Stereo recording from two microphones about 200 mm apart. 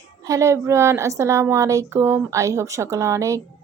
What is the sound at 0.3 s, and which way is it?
A woman's voice, 15° right (ahead or behind).